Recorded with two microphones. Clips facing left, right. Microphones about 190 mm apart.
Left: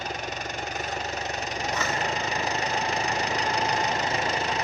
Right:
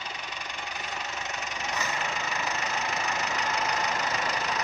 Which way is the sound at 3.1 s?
35° left (ahead or behind).